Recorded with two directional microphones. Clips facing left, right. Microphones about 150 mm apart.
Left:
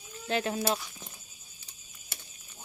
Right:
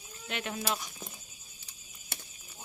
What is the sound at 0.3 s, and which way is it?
Speech, 35° left (ahead or behind).